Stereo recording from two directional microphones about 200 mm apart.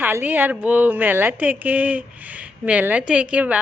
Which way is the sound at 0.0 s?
10° right (ahead or behind).